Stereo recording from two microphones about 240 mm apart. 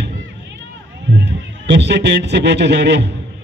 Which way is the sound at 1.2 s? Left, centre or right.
Right.